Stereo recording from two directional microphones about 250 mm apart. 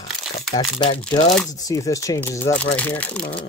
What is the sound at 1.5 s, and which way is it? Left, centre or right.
Speech, centre.